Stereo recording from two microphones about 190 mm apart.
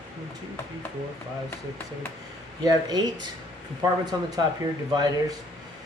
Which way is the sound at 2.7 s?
20° right (ahead or behind).